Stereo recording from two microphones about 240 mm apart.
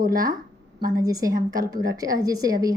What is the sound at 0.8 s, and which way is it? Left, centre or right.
A woman's voice, centre.